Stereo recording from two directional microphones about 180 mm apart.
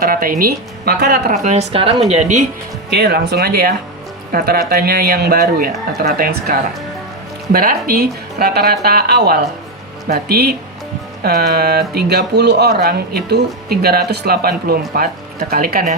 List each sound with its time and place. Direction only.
0.0 s speech: 55° right (ahead or behind)
1.3 s a woman's voice: 40° right (ahead or behind)
2.9 s speech: 65° right (ahead or behind)